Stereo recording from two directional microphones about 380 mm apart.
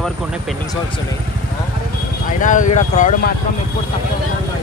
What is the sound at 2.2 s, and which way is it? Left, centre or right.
Speech, centre.